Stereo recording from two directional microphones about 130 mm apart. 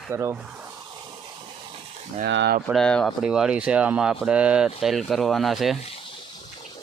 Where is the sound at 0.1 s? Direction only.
20° right (ahead or behind).